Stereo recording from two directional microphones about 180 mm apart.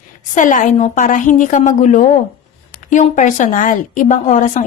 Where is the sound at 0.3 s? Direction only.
45° left (ahead or behind).